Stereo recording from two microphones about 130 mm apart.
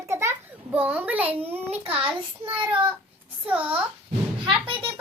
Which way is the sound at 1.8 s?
45° right (ahead or behind).